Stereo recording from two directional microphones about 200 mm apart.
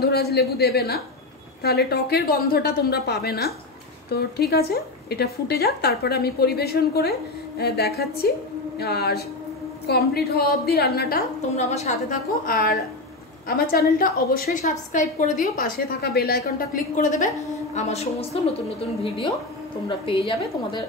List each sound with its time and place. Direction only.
0.0 s a woman's voice: 50° left (ahead or behind)
11.5 s a woman's voice: 35° left (ahead or behind)
13.9 s a woman's voice: 45° left (ahead or behind); by 20.8 s 25° left (ahead or behind)